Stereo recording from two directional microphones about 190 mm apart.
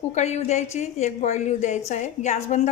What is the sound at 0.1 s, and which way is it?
A woman's voice, 35° left (ahead or behind).